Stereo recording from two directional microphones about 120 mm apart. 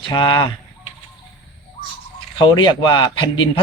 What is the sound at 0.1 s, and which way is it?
Speech, 35° left (ahead or behind).